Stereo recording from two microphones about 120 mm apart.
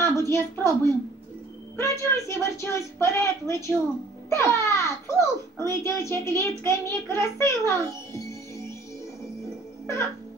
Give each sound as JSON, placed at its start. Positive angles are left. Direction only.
{"t": 0.0, "sound": "a woman's voice", "side_deg": 25}